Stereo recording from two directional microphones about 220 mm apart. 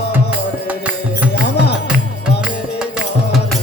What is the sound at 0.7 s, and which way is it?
Music, 5° right (ahead or behind).